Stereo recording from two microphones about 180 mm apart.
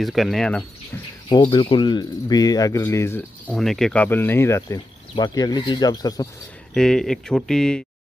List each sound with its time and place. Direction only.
0.0 s speech: centre (ahead or behind)
1.3 s speech: 25° left (ahead or behind)
3.5 s speech: 5° left (ahead or behind); by 6.2 s 20° left (ahead or behind)
6.7 s speech: 5° left (ahead or behind)